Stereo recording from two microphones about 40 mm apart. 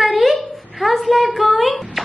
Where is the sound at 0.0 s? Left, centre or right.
Centre.